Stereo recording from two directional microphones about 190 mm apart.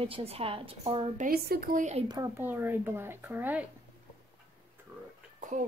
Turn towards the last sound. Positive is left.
turn(degrees=-40)  # may be behind; listen again after turning